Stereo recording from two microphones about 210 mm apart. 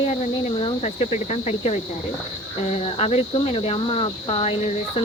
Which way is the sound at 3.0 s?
30° left (ahead or behind).